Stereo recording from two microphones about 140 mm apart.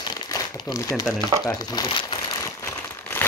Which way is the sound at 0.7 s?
25° left (ahead or behind).